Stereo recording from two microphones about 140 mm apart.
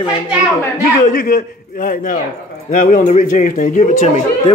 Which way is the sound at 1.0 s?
90° left.